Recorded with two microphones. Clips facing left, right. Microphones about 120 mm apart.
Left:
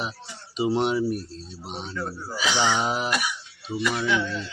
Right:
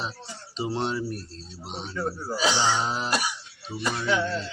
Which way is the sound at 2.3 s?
35° right (ahead or behind).